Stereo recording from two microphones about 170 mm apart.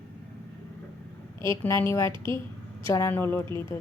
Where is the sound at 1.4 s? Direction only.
15° left (ahead or behind).